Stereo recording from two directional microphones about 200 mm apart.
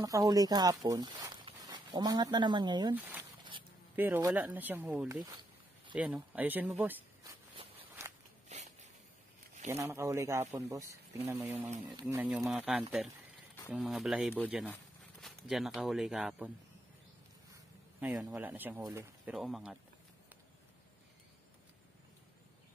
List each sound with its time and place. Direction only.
0.0 s speech: 15° right (ahead or behind)
2.9 s speech: 10° right (ahead or behind)
5.2 s a sound: 20° right (ahead or behind)
5.9 s speech: 5° right (ahead or behind)
8.5 s a sound: 35° right (ahead or behind)
9.7 s speech: 15° right (ahead or behind)
12.2 s speech: 5° right (ahead or behind)
13.6 s a sound: 10° left (ahead or behind)
13.8 s speech: centre (ahead or behind)
18.0 s speech: 5° right (ahead or behind)
19.3 s speech: centre (ahead or behind)